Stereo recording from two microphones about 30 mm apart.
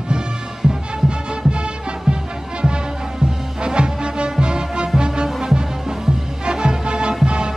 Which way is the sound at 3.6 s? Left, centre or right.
Right.